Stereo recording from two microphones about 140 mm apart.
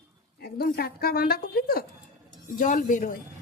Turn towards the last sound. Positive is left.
turn(degrees=70)  # may be behind; listen again after turning